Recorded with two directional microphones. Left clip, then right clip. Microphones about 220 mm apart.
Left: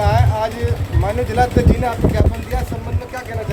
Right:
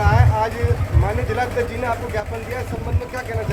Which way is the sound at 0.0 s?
50° left (ahead or behind).